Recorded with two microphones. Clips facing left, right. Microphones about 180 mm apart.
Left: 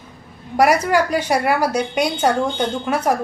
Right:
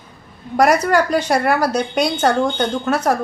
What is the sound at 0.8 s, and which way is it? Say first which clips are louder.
Speech: right 2 dB; 10° left (ahead or behind).